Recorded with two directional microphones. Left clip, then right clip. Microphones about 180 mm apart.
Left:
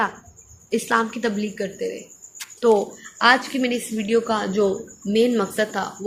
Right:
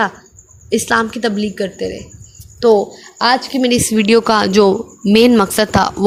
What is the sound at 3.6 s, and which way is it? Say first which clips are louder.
A woman's voice: right 10 dB; 60° right (ahead or behind).